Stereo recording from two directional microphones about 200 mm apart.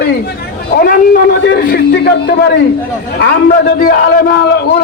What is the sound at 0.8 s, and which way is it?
A man's voice, 50° left (ahead or behind).